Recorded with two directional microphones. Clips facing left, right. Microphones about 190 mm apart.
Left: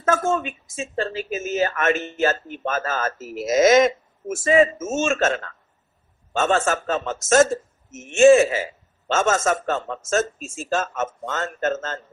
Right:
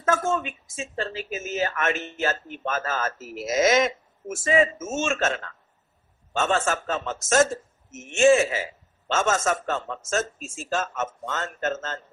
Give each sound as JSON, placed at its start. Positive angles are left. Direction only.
{"t": 0.0, "sound": "a woman's voice", "side_deg": 45}